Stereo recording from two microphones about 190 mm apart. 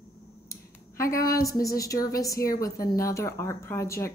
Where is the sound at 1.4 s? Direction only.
15° left (ahead or behind).